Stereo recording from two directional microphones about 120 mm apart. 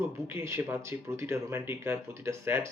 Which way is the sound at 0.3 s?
20° right (ahead or behind).